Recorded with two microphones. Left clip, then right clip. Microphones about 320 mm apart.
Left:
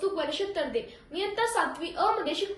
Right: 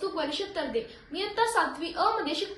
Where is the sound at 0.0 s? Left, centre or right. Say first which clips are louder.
Left 2 dB; centre.